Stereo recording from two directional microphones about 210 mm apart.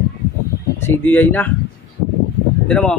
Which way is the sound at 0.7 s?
10° left (ahead or behind).